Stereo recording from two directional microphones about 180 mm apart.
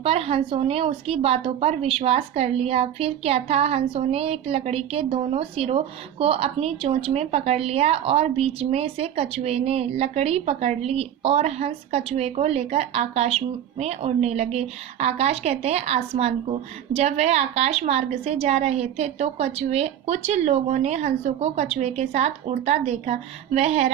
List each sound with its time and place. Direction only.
0.0 s a woman's voice: 35° right (ahead or behind)